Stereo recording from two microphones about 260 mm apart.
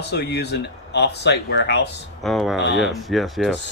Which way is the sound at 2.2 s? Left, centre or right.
Centre.